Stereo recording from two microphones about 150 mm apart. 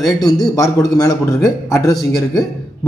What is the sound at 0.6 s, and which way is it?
A man's voice, 25° left (ahead or behind).